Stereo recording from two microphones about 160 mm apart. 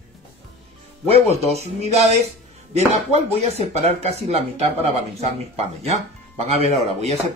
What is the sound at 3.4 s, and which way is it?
Speech, 45° right (ahead or behind).